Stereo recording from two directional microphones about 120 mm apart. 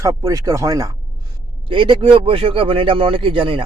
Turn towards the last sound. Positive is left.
turn(degrees=-45)  # may be behind; listen again after turning